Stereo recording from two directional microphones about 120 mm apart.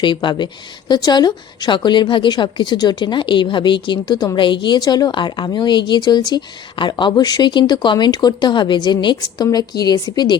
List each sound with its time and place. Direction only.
0.0 s speech: 40° left (ahead or behind)